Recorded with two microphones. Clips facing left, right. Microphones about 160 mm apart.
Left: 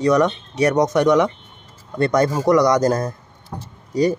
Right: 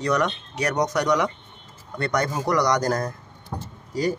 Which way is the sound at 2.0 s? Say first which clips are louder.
Left 7 dB; 25° left (ahead or behind).